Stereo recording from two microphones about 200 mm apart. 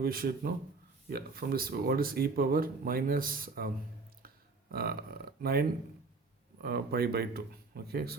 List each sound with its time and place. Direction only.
0.0 s speech: 50° right (ahead or behind)
4.7 s speech: 50° right (ahead or behind)